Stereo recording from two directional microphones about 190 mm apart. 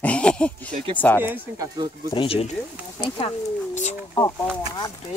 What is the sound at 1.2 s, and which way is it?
Speech, 10° right (ahead or behind).